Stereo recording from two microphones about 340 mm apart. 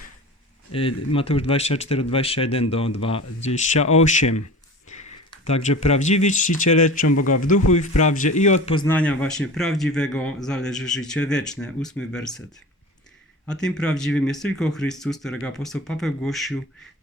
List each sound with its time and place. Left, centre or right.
0.7 s speech: centre
4.9 s a sound: left
5.8 s a man's voice: left; by 12.4 s centre
13.4 s a man's voice: centre